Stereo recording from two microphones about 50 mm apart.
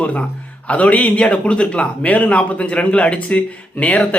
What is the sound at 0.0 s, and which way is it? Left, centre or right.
A man's voice, left.